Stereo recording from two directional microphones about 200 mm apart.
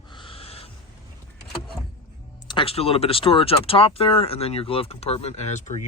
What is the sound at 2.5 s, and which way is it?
Speech, 25° left (ahead or behind).